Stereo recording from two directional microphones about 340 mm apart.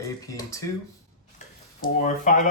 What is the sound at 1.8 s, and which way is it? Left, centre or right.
Speech, left.